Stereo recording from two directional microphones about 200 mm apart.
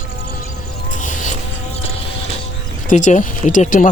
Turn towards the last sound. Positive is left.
turn(degrees=40)  # may be behind; listen again after turning